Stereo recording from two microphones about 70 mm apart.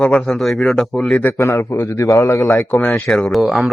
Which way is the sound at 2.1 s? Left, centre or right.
Left.